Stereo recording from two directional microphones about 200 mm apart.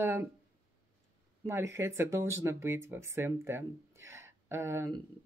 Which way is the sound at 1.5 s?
10° right (ahead or behind).